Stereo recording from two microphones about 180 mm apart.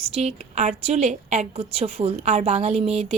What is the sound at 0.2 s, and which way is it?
A woman's voice, 40° right (ahead or behind).